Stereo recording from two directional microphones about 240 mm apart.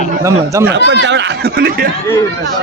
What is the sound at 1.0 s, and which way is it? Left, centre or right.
Speech, right.